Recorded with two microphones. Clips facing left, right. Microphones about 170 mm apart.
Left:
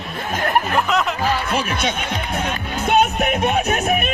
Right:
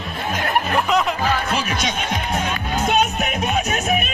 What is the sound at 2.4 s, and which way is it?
Music, 60° left (ahead or behind).